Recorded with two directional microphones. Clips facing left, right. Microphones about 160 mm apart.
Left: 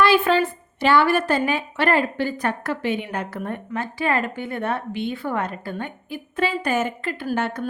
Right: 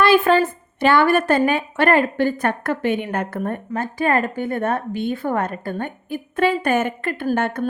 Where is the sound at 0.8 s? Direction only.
55° right (ahead or behind).